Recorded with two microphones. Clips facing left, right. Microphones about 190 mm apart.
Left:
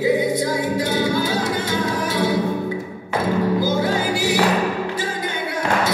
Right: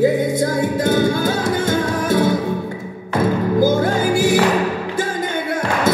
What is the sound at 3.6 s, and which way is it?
Music, 50° right (ahead or behind).